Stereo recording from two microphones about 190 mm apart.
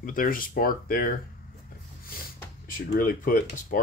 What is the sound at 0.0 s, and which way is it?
Speech, 45° left (ahead or behind).